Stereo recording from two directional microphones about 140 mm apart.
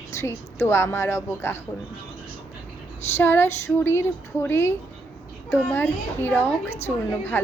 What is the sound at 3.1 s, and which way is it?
A woman's voice, 15° left (ahead or behind).